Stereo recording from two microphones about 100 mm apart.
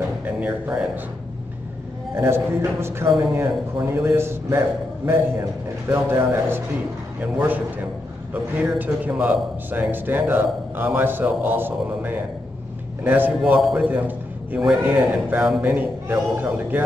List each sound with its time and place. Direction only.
0.2 s music: 15° right (ahead or behind)
2.1 s a man's voice: 25° right (ahead or behind)